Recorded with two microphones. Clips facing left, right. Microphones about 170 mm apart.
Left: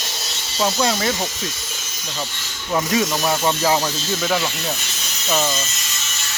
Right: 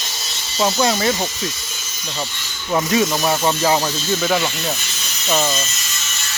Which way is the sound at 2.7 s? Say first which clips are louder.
Right 2 dB; 5° right (ahead or behind).